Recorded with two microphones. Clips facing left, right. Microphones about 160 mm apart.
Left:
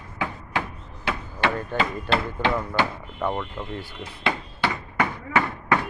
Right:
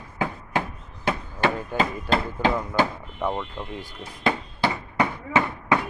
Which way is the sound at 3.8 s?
40° right (ahead or behind).